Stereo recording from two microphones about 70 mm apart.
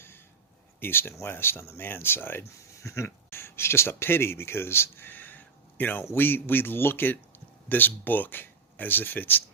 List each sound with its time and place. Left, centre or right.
0.8 s speech: left
2.8 s a man's voice: left